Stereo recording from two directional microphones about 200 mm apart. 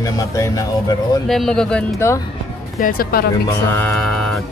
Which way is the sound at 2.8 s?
45° left (ahead or behind).